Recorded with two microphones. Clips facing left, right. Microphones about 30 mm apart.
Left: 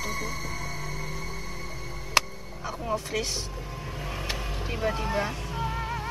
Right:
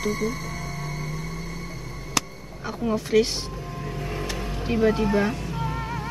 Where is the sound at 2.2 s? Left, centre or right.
Left.